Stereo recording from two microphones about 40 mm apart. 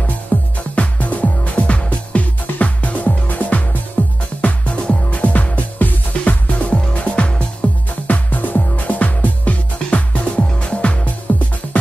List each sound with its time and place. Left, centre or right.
0.3 s music: left
0.7 s music: left
6.7 s music: left
8.1 s music: left